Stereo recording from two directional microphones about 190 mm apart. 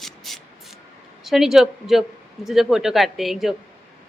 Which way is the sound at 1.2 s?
Centre (ahead or behind).